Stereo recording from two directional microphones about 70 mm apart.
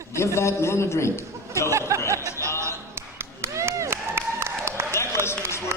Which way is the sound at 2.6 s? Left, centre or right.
Right.